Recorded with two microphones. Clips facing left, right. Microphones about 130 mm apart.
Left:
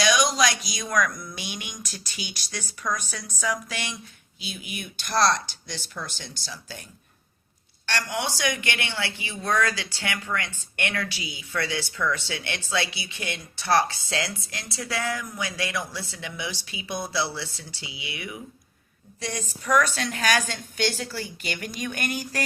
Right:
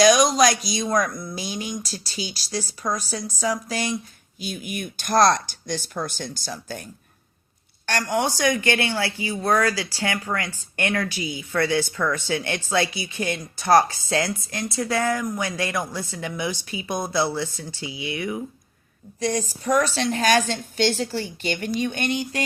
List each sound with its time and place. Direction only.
0.0 s speech: 40° right (ahead or behind)
7.9 s speech: 45° right (ahead or behind)
19.2 s speech: 35° right (ahead or behind)